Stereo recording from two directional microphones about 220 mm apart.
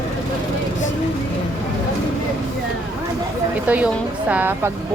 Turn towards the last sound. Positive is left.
turn(degrees=-10)  # may be behind; listen again after turning